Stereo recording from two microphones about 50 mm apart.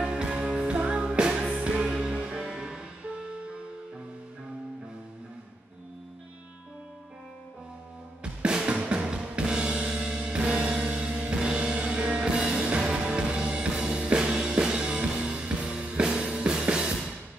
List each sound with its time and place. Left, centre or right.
0.0 s music: centre
8.2 s drum: centre
8.8 s music: centre